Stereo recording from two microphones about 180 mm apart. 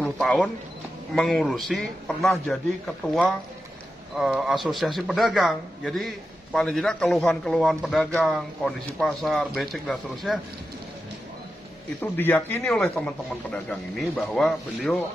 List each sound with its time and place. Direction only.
0.0 s a man's voice: 5° left (ahead or behind)
4.2 s a man's voice: 5° right (ahead or behind)
12.0 s a man's voice: 10° left (ahead or behind)